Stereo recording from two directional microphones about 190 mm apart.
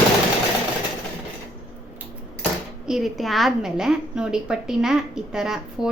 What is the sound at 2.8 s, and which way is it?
A woman's voice, centre (ahead or behind).